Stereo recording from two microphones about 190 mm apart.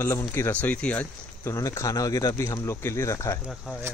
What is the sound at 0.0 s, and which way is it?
Speech, 15° left (ahead or behind).